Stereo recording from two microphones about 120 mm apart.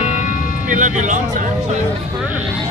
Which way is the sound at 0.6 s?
90° right.